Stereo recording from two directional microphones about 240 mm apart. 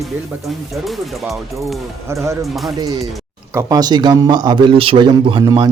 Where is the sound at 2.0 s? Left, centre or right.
Centre.